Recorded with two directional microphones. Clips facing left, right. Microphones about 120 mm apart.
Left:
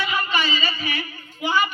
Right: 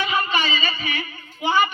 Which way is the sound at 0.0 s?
20° right (ahead or behind).